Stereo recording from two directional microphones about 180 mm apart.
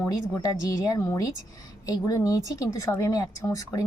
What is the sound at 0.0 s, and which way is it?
A woman's voice, 15° left (ahead or behind).